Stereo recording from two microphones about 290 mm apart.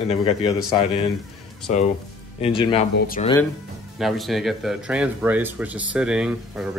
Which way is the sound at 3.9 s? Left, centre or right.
Centre.